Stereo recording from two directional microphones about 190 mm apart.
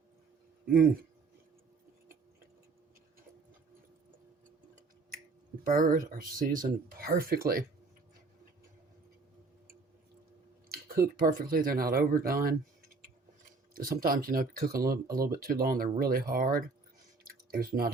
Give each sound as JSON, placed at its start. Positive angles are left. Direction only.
{"t": 0.7, "sound": "speech", "side_deg": -50}
{"t": 5.6, "sound": "speech", "side_deg": -45}
{"t": 10.7, "sound": "speech", "side_deg": -50}
{"t": 14.0, "sound": "speech", "side_deg": -50}
{"t": 17.2, "sound": "a sound", "side_deg": -50}